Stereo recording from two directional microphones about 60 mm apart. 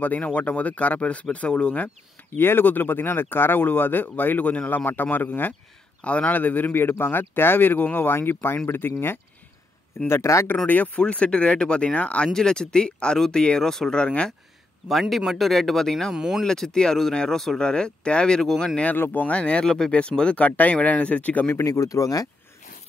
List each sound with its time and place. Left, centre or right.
0.0 s speech: left
2.3 s speech: left
10.0 s speech: left
11.0 s speech: centre
12.3 s speech: centre
14.9 s speech: centre
16.2 s speech: centre
16.4 s speech: centre
18.9 s speech: left
19.3 s speech: centre
21.6 s speech: left